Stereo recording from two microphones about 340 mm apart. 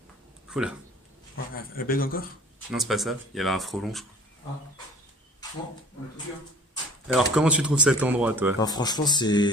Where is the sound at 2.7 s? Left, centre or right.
Centre.